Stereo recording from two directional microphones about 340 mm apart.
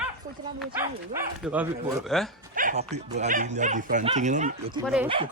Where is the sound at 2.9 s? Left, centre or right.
Centre.